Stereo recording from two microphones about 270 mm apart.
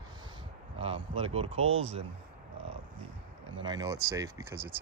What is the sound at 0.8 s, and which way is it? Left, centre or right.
Speech, right.